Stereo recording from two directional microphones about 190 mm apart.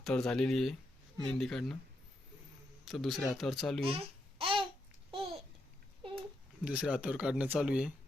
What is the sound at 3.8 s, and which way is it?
Babbling, 30° right (ahead or behind).